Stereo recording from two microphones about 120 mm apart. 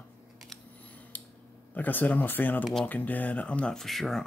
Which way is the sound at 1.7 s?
15° left (ahead or behind).